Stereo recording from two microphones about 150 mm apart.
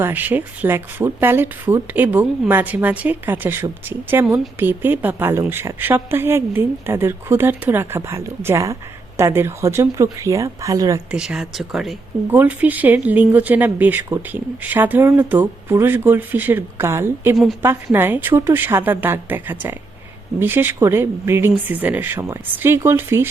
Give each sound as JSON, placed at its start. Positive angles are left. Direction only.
{"t": 0.0, "sound": "a woman's voice", "side_deg": -10}
{"t": 11.1, "sound": "speech", "side_deg": -5}
{"t": 12.3, "sound": "a woman's voice", "side_deg": -10}
{"t": 17.3, "sound": "speech", "side_deg": 0}
{"t": 17.9, "sound": "a woman's voice", "side_deg": -15}